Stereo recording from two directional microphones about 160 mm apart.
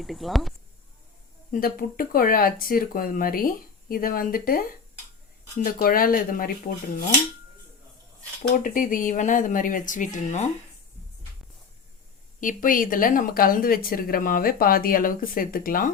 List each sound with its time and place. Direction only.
0.0 s speech: centre (ahead or behind)
1.5 s speech: 60° left (ahead or behind)
8.4 s speech: 55° left (ahead or behind)
12.4 s speech: 55° left (ahead or behind)